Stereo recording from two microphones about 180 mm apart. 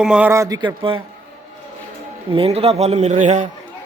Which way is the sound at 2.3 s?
35° right (ahead or behind).